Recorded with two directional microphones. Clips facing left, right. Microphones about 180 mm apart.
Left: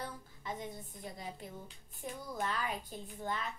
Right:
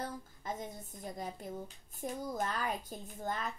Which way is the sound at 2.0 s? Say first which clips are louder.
Right 3 dB; 45° right (ahead or behind).